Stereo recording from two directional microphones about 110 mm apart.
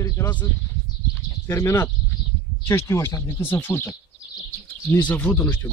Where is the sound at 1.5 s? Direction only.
25° left (ahead or behind).